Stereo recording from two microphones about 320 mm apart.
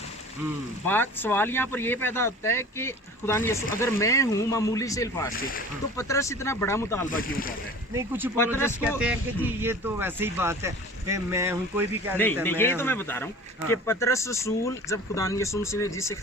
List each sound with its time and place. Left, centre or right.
0.9 s speech: centre
5.3 s speech: left
6.0 s speech: centre
7.1 s speech: left
7.9 s speech: centre
8.5 s speech: centre
9.0 s speech: centre
12.1 s speech: centre